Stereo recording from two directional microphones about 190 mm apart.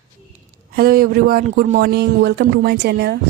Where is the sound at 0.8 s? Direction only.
50° right (ahead or behind).